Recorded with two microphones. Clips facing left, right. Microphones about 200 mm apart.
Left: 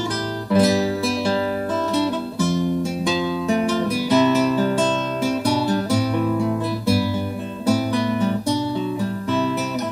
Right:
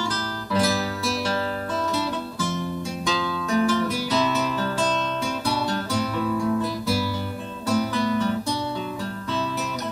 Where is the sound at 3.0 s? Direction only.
20° left (ahead or behind).